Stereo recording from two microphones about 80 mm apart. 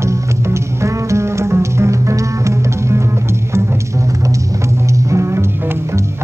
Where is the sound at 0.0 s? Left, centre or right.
Right.